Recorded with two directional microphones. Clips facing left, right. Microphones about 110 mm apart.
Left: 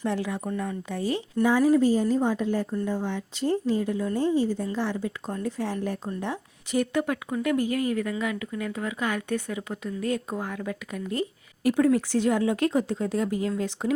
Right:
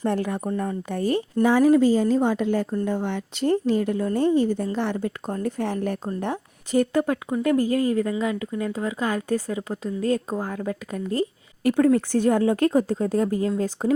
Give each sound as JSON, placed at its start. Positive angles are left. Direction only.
{"t": 0.0, "sound": "speech", "side_deg": -50}
{"t": 0.5, "sound": "speech", "side_deg": -35}
{"t": 0.9, "sound": "speech", "side_deg": -50}
{"t": 1.5, "sound": "a woman's voice", "side_deg": -70}
{"t": 2.8, "sound": "a woman's voice", "side_deg": -65}
{"t": 11.6, "sound": "speech", "side_deg": -50}